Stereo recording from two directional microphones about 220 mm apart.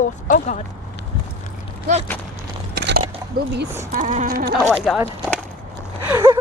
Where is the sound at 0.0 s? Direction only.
35° left (ahead or behind).